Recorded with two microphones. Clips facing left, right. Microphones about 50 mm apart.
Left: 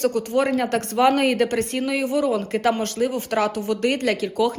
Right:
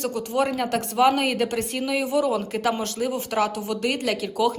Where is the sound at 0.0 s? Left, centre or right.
Left.